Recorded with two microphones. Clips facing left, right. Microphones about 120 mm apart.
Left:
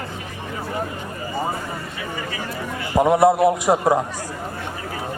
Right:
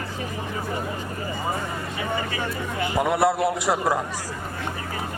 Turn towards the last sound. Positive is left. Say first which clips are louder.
# left 5 dB
turn(degrees=20)  # may be behind; listen again after turning